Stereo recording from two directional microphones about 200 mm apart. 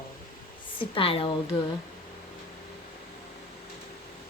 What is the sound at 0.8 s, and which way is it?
Speech, 25° left (ahead or behind).